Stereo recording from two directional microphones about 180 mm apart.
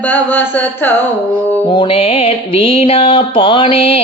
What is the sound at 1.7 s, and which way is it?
Music, 30° left (ahead or behind).